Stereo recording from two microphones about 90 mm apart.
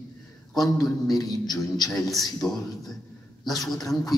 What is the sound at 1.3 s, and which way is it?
A man's voice, centre (ahead or behind).